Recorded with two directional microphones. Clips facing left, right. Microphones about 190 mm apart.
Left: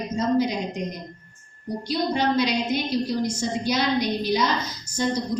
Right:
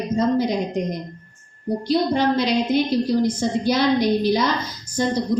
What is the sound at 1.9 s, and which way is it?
A woman's voice, 55° right (ahead or behind).